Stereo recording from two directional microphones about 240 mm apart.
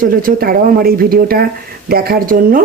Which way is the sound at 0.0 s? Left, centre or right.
Right.